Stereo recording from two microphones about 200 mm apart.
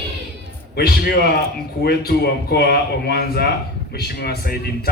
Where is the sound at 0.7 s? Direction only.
50° left (ahead or behind).